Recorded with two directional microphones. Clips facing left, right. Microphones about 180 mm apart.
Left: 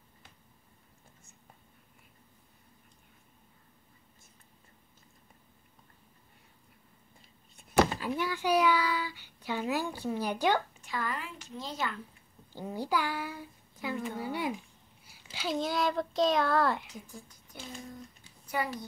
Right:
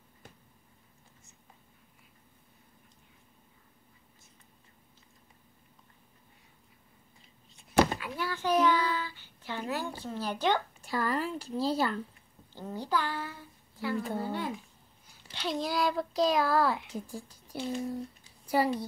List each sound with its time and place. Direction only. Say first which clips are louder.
8.2 s speech: right 1 dB; 15° left (ahead or behind)
10.8 s speech: right 5 dB; 35° right (ahead or behind)
12.5 s a child's voice: even; 10° left (ahead or behind)
16.9 s speech: right 7 dB; 30° right (ahead or behind)